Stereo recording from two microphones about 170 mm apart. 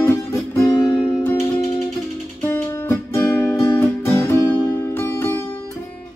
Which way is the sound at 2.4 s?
10° left (ahead or behind).